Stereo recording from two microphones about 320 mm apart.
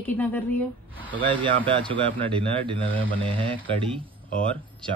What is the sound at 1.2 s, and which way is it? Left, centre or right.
Speech, centre.